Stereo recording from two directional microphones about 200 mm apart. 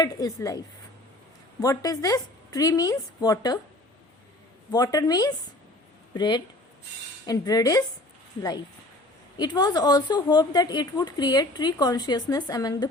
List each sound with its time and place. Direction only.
0.0 s a woman's voice: 20° left (ahead or behind)
1.6 s a woman's voice: 15° left (ahead or behind)
4.7 s a woman's voice: 20° left (ahead or behind)